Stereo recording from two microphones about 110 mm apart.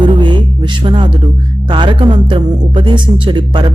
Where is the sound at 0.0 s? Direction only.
45° right (ahead or behind).